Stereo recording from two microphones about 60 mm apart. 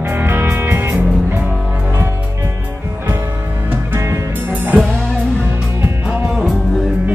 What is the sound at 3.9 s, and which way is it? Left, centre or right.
Music, right.